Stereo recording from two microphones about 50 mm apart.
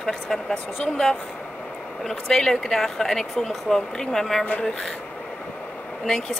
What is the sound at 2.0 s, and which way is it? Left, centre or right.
Speech, centre.